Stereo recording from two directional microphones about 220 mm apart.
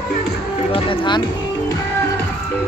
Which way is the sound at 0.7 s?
20° left (ahead or behind).